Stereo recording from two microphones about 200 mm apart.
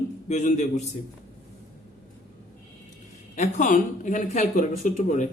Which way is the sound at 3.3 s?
35° left (ahead or behind).